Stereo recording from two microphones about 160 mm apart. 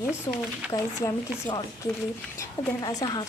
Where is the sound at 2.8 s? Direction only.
25° left (ahead or behind).